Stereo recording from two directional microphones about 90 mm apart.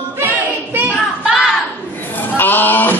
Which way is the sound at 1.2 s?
10° right (ahead or behind).